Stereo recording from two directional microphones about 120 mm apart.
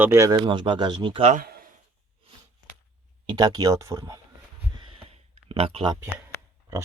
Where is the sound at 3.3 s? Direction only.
35° right (ahead or behind).